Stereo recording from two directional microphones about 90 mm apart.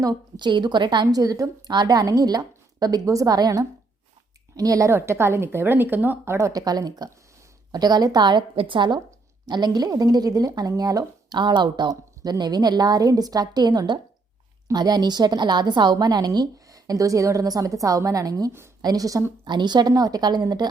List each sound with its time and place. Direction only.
0.0 s a woman's voice: 50° right (ahead or behind)
1.0 s speech: 45° right (ahead or behind)
4.9 s a woman's voice: 30° right (ahead or behind)
6.5 s a woman's voice: 45° right (ahead or behind); by 9.0 s 65° right (ahead or behind)
9.5 s speech: 50° right (ahead or behind)
19.5 s a woman's voice: 55° right (ahead or behind)
19.9 s speech: 45° right (ahead or behind)